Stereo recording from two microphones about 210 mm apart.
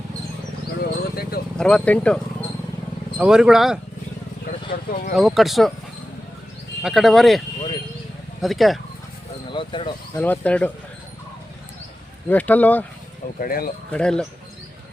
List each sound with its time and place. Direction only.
1.1 s vehicle: 45° left (ahead or behind)
1.5 s speech: 5° left (ahead or behind)
4.7 s speech: 45° left (ahead or behind)
5.1 s speech: centre (ahead or behind)
6.8 s speech: centre (ahead or behind)
9.5 s speech: 25° left (ahead or behind)
10.2 s speech: 5° left (ahead or behind)
12.3 s speech: 10° left (ahead or behind)
13.4 s speech: 45° left (ahead or behind)
13.9 s speech: 5° left (ahead or behind)